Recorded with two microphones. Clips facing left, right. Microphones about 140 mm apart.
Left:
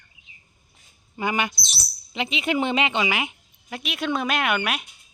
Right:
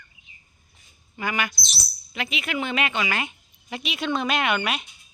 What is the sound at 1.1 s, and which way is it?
A woman's voice, 25° left (ahead or behind).